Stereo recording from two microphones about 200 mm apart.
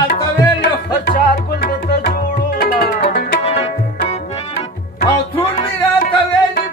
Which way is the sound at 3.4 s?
30° left (ahead or behind).